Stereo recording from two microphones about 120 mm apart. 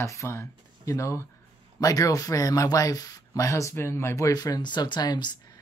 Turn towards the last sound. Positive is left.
turn(degrees=35)  # may be behind; listen again after turning